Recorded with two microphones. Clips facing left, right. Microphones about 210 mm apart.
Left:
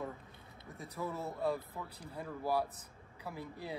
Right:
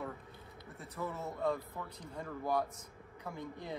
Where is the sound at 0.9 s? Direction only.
10° left (ahead or behind).